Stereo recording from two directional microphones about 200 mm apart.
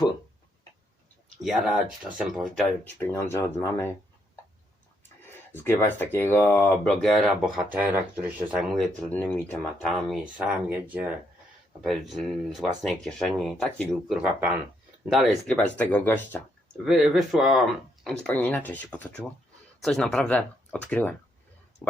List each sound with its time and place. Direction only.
1.4 s speech: centre (ahead or behind)
5.5 s speech: 10° left (ahead or behind)
9.0 s speech: 10° left (ahead or behind)
10.1 s speech: 5° right (ahead or behind)
11.8 s speech: centre (ahead or behind)
16.8 s speech: centre (ahead or behind)